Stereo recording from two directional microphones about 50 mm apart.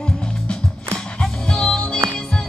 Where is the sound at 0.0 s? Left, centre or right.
Centre.